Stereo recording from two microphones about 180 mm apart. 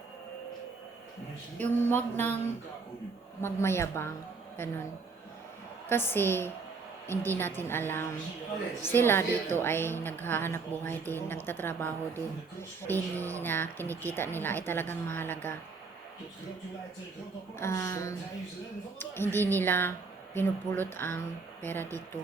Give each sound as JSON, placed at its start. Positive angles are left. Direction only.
{"t": 1.5, "sound": "a woman's voice", "side_deg": 10}
{"t": 3.4, "sound": "a woman's voice", "side_deg": 15}
{"t": 5.9, "sound": "a woman's voice", "side_deg": 10}
{"t": 17.6, "sound": "a woman's voice", "side_deg": 15}